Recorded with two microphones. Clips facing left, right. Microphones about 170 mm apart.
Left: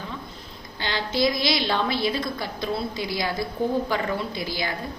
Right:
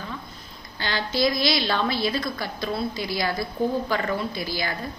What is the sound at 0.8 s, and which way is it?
A woman's voice, 20° left (ahead or behind).